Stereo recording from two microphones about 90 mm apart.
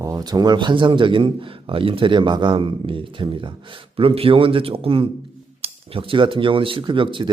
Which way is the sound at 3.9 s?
90° right.